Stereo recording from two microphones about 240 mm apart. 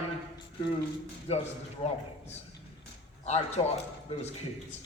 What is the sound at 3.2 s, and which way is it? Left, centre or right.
Speech, left.